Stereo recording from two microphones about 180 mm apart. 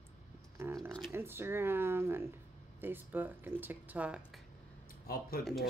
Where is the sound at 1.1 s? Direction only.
10° right (ahead or behind).